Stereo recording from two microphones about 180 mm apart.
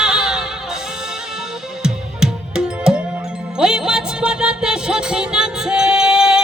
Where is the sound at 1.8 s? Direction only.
5° right (ahead or behind).